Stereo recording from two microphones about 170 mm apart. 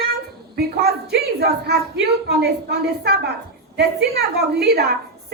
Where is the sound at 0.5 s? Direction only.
65° right (ahead or behind).